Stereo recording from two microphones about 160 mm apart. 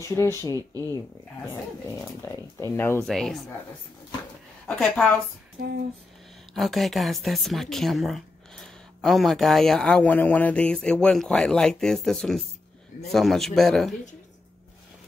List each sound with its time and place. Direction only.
0.0 s speech: 15° left (ahead or behind)
2.2 s speech: 15° left (ahead or behind)
3.1 s speech: centre (ahead or behind)
4.6 s speech: 5° left (ahead or behind)
6.5 s speech: centre (ahead or behind)